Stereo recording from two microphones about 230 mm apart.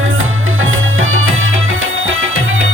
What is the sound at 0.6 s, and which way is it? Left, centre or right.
Music, right.